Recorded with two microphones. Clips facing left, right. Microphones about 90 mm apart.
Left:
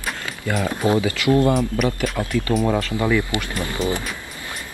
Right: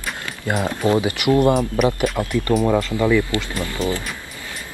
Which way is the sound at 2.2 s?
20° right (ahead or behind).